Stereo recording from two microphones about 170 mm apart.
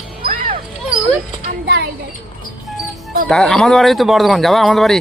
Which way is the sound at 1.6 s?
80° right.